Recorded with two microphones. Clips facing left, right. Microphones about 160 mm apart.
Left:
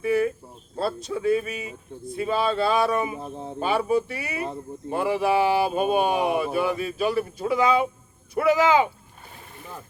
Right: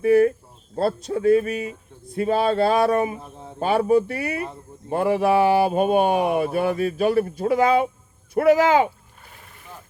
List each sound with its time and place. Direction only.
0.0 s a sound: 50° right (ahead or behind)
0.8 s speech: 55° right (ahead or behind)
3.2 s speech: 30° left (ahead or behind)
3.6 s speech: 55° right (ahead or behind)